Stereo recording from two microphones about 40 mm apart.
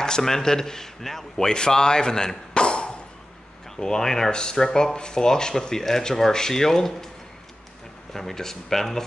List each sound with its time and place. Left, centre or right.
0.0 s speech: centre
3.7 s speech: centre
8.1 s speech: centre